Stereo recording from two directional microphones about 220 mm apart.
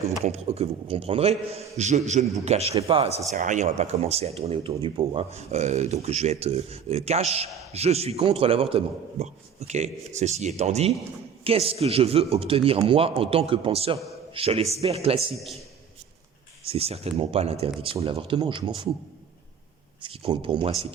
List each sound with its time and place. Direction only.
0.3 s speech: 30° right (ahead or behind)
15.4 s a man's voice: centre (ahead or behind)
16.6 s speech: 25° right (ahead or behind)
20.0 s speech: 25° right (ahead or behind)